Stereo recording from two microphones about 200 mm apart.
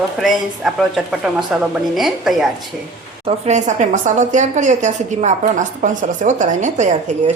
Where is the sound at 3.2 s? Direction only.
35° right (ahead or behind).